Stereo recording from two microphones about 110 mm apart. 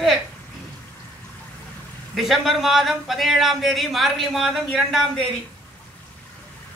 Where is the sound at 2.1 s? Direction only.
Centre (ahead or behind).